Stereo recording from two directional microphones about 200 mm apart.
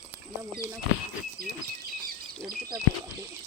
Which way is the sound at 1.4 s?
50° right (ahead or behind).